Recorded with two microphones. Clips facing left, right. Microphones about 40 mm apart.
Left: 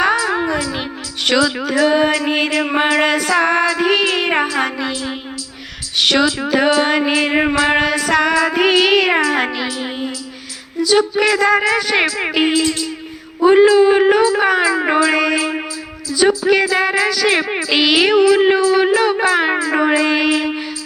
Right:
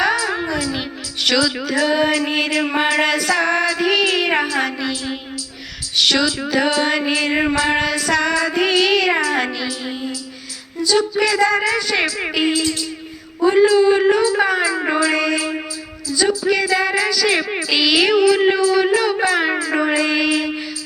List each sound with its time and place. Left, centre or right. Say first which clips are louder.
0.0 s music: left 3 dB; centre
6.0 s mantra: left 2 dB; left
10.8 s music: left 3 dB; left
11.3 s speech: left 2 dB; left
16.7 s a sound: left 2 dB; left
18.1 s a sound: left 3 dB; centre